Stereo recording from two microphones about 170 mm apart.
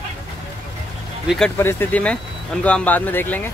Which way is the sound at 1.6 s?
15° left (ahead or behind).